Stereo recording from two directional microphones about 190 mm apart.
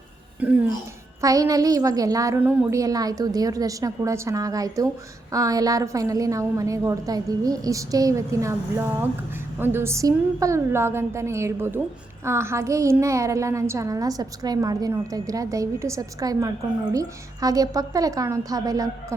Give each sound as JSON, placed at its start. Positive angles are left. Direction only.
{"t": 0.3, "sound": "a woman's voice", "side_deg": -10}
{"t": 9.6, "sound": "a woman's voice", "side_deg": -10}